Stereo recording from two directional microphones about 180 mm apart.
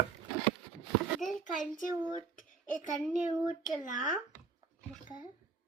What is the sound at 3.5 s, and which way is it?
Speech, 45° left (ahead or behind).